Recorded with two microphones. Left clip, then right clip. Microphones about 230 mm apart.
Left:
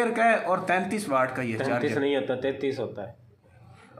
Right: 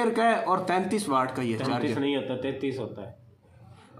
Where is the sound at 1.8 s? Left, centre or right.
Left.